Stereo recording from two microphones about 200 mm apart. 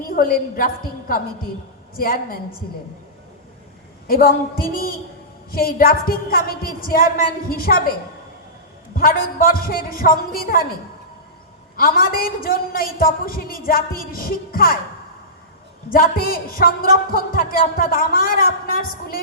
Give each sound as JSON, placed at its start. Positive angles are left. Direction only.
{"t": 0.0, "sound": "a woman's voice", "side_deg": 45}
{"t": 4.0, "sound": "a woman's voice", "side_deg": 45}
{"t": 9.0, "sound": "a woman's voice", "side_deg": 45}
{"t": 11.8, "sound": "a woman's voice", "side_deg": 45}
{"t": 15.9, "sound": "a woman's voice", "side_deg": 45}